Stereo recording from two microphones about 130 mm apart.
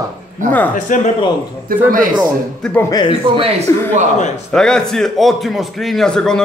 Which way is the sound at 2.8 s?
30° left (ahead or behind).